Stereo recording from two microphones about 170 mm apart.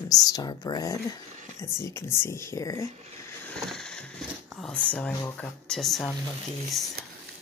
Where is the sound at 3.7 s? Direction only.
5° left (ahead or behind).